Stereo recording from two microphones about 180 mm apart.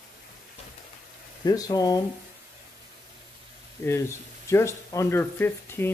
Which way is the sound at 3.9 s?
15° left (ahead or behind).